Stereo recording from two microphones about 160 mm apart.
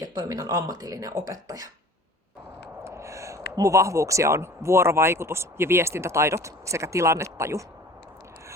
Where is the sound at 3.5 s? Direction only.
20° right (ahead or behind).